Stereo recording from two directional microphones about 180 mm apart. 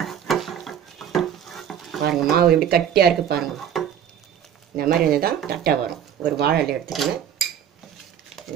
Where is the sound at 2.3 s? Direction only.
60° right (ahead or behind).